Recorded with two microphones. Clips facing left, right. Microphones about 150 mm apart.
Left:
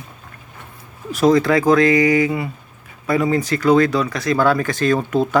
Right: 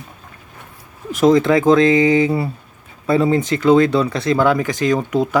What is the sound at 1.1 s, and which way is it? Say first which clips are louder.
Speech: right 2 dB; 20° right (ahead or behind).